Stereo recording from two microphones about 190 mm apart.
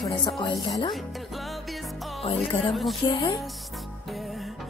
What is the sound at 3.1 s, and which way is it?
Speech, 25° left (ahead or behind).